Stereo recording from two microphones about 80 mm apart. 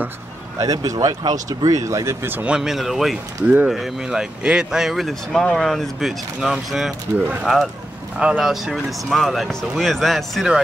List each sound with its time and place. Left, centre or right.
0.6 s speech: right
2.3 s speech: centre
7.2 s speech: right
7.4 s speech: centre